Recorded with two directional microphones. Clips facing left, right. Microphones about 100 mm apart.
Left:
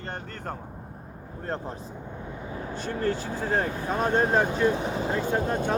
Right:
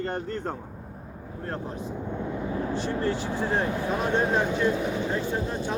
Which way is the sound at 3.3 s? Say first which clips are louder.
Right 1 dB; 40° left (ahead or behind).